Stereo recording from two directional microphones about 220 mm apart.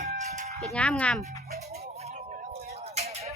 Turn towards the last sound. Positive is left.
turn(degrees=-30)  # may be behind; listen again after turning